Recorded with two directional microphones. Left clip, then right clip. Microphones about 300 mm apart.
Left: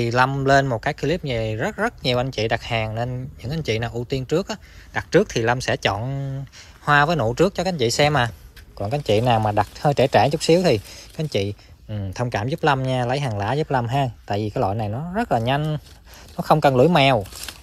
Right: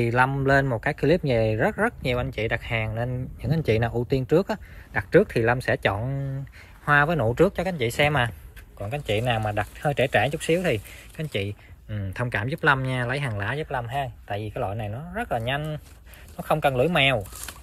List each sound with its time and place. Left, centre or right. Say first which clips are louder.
0.0 s speech: left 3 dB; centre